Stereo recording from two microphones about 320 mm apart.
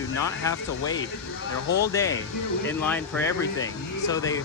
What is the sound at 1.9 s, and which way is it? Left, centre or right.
Speech, centre.